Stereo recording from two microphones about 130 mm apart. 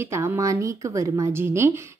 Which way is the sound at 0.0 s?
20° right (ahead or behind).